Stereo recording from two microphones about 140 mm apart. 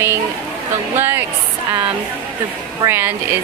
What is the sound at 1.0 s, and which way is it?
Speech, 15° right (ahead or behind).